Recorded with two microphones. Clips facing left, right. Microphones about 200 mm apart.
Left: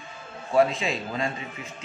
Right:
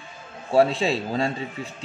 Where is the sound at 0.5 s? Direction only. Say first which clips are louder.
Right 3 dB; 35° right (ahead or behind).